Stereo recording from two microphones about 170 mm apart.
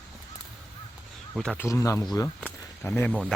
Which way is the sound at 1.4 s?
5° left (ahead or behind).